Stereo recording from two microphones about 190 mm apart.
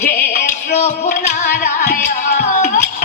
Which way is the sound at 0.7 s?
35° left (ahead or behind).